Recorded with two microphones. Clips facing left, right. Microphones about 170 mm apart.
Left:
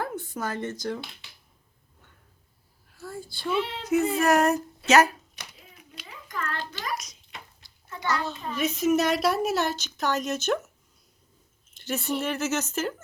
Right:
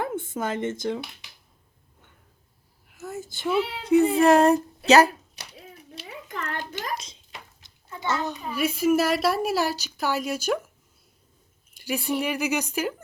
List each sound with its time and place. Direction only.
0.0 s speech: 25° right (ahead or behind)
2.9 s a sound: 20° right (ahead or behind)
3.5 s a child's voice: 5° right (ahead or behind)
3.8 s child singing: 30° right (ahead or behind)
4.2 s speech: 30° right (ahead or behind)
4.9 s music: 35° right (ahead or behind)
5.7 s a sound: 30° right (ahead or behind)
6.9 s a child's voice: 30° right (ahead or behind); by 10.7 s 10° right (ahead or behind)
11.8 s speech: 5° right (ahead or behind)
12.2 s a child's voice: 15° right (ahead or behind)